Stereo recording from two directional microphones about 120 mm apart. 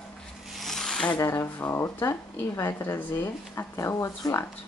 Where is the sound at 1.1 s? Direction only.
25° left (ahead or behind).